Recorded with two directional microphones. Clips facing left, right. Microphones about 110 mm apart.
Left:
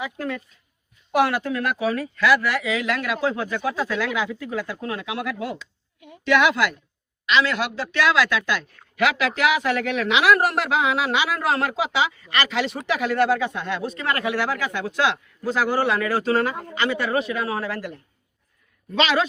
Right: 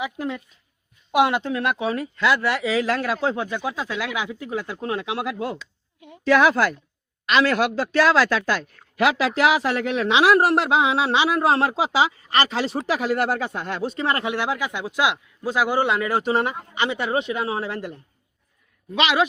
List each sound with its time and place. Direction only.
0.0 s a man's voice: 20° right (ahead or behind)
18.9 s speech: 15° right (ahead or behind)